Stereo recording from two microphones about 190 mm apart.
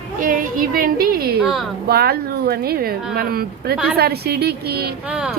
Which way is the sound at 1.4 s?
Centre (ahead or behind).